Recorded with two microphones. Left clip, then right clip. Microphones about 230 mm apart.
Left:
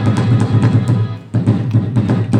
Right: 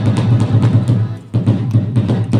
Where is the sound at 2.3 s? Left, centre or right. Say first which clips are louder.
Left 1 dB; centre.